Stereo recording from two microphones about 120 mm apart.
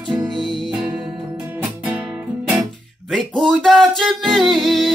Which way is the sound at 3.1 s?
Centre (ahead or behind).